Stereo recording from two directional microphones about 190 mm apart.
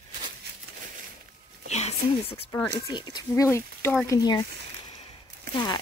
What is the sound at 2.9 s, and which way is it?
Speech, 20° left (ahead or behind).